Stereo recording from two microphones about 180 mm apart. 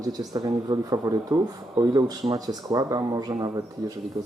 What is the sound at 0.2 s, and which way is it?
Speech, 20° right (ahead or behind).